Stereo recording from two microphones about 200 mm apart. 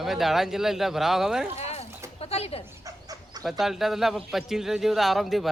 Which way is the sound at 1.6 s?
30° left (ahead or behind).